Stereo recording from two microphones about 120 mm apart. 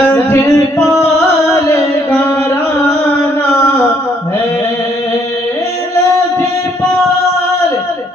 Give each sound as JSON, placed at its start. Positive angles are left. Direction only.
{"t": 0.1, "sound": "music", "side_deg": 20}